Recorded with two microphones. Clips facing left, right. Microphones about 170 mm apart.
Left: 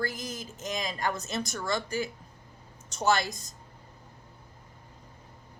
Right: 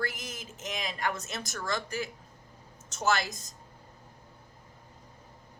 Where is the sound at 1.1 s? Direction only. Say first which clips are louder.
Left 4 dB; centre (ahead or behind).